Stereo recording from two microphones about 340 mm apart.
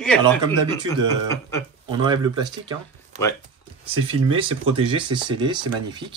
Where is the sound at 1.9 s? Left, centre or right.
Centre.